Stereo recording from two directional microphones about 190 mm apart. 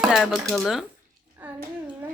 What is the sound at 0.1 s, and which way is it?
Speech, centre (ahead or behind).